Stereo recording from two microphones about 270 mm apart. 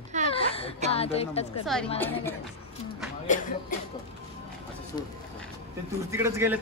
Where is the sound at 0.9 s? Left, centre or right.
Left.